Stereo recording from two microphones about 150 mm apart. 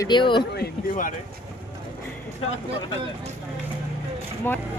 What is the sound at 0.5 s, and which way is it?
Speech, 65° left (ahead or behind).